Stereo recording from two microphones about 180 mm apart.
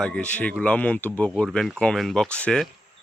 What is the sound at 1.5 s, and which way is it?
Speech, centre (ahead or behind).